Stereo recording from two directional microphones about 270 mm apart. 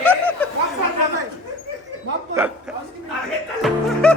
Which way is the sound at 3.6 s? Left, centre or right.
Centre.